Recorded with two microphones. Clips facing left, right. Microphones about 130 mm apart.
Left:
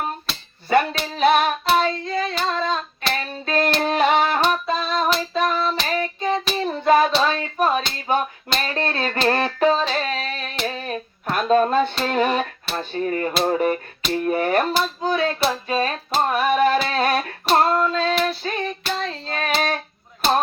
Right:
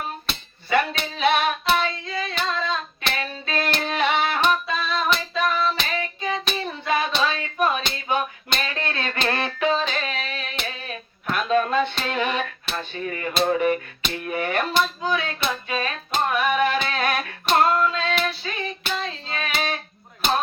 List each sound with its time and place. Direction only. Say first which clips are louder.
0.7 s music: left 4 dB; 40° left (ahead or behind)
1.7 s hands: left 4 dB; 40° left (ahead or behind)
3.1 s a sound: left 4 dB; 40° left (ahead or behind)
3.8 s female singing: left 4 dB; 40° left (ahead or behind)
5.8 s child singing: left 5 dB; 35° left (ahead or behind)
7.2 s a sound: left 3 dB; 40° left (ahead or behind)
8.1 s music: left 3 dB; 40° left (ahead or behind)
10.7 s a sound: left 6 dB; 35° left (ahead or behind)
12.7 s speech: left 7 dB; 35° left (ahead or behind)
15.4 s a sound: left 5 dB; 35° left (ahead or behind)
17.5 s female singing: left 2 dB; 35° left (ahead or behind)
18.9 s child singing: left 3 dB; 45° left (ahead or behind)